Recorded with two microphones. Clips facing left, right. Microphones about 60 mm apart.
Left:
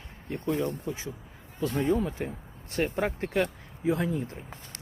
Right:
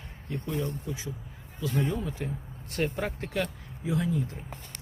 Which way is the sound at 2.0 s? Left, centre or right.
Left.